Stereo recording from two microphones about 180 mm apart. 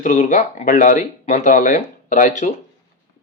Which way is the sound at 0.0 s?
45° left (ahead or behind).